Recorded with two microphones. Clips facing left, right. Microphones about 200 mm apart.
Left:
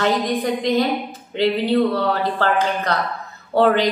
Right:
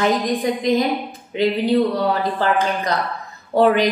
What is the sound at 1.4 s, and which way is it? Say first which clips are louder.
A woman's voice: even; 15° right (ahead or behind).